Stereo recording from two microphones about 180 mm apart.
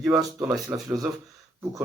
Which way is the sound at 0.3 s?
15° right (ahead or behind).